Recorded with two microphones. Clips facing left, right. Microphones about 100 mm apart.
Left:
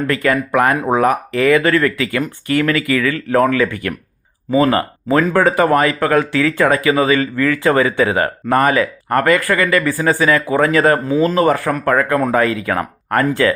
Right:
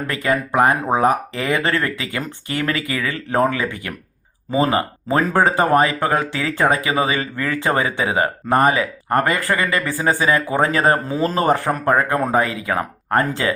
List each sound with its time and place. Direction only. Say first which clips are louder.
0.1 s speech: left 3 dB; 20° right (ahead or behind)